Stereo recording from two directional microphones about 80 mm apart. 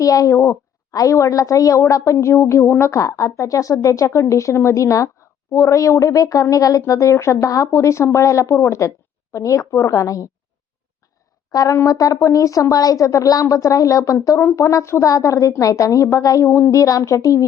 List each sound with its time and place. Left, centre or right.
0.0 s a woman's voice: left
11.5 s a woman's voice: left